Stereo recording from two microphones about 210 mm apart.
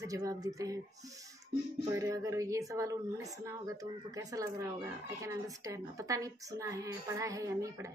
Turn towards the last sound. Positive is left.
turn(degrees=-15)  # may be behind; listen again after turning